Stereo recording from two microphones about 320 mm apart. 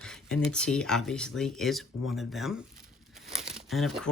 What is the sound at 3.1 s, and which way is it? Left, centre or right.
Crumpling, centre.